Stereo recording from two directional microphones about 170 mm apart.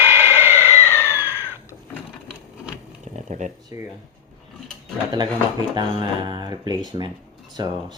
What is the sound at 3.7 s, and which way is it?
Speech, 20° right (ahead or behind).